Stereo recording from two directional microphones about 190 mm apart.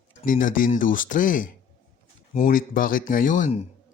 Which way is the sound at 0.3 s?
45° left (ahead or behind).